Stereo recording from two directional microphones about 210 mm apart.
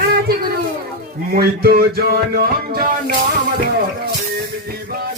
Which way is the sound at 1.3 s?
45° right (ahead or behind).